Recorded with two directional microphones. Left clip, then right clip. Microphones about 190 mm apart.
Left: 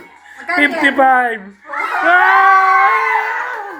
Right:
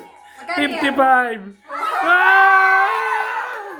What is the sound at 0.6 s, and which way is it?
Speech, 15° right (ahead or behind).